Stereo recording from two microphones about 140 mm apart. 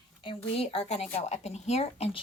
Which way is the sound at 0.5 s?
45° left (ahead or behind).